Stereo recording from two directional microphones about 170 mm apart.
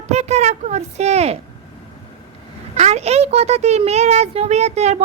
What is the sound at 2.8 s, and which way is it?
A woman's voice, 40° right (ahead or behind).